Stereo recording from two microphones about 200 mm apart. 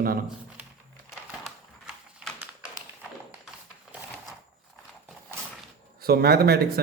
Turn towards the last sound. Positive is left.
turn(degrees=-50)  # may be behind; listen again after turning